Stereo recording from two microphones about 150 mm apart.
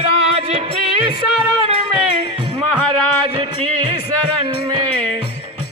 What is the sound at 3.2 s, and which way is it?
Music, 35° right (ahead or behind).